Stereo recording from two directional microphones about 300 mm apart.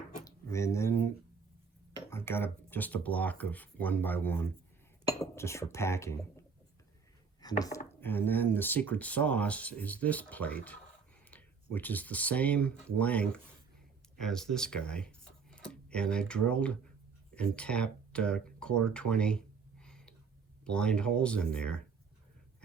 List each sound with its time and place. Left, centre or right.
0.3 s speech: centre
7.4 s speech: centre